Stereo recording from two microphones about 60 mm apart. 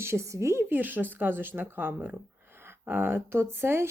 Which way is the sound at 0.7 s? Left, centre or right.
Right.